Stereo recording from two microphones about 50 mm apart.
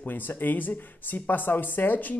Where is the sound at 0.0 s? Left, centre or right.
Left.